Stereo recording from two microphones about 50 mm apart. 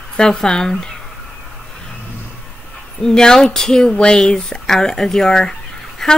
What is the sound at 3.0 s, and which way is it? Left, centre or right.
Speech, centre.